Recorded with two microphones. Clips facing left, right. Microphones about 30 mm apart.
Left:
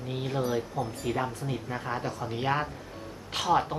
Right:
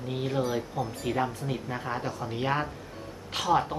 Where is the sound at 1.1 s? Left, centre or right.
Centre.